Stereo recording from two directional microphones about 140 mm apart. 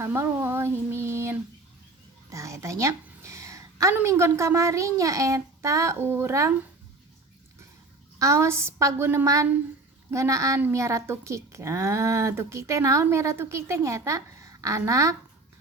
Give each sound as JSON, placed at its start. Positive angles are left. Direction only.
{"t": 0.0, "sound": "a woman's voice", "side_deg": -15}
{"t": 8.2, "sound": "a woman's voice", "side_deg": -20}